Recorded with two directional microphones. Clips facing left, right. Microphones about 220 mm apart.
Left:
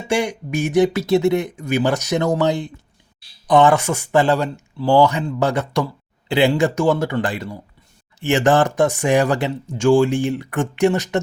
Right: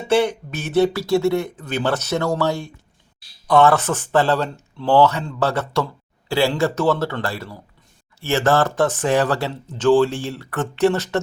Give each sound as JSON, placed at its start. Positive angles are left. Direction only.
{"t": 0.1, "sound": "speech", "side_deg": 15}